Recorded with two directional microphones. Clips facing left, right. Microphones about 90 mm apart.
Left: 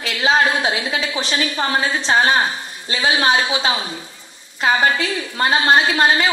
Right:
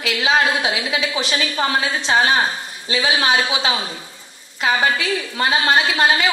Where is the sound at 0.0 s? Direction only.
35° left (ahead or behind).